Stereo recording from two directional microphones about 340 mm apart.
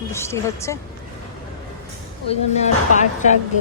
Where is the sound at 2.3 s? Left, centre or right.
Left.